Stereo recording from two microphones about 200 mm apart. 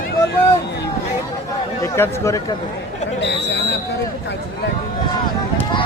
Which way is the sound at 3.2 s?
60° left (ahead or behind).